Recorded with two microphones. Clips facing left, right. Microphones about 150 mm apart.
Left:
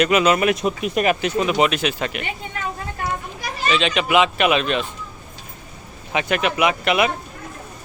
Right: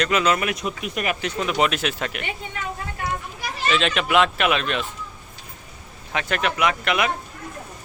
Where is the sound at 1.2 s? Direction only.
5° left (ahead or behind).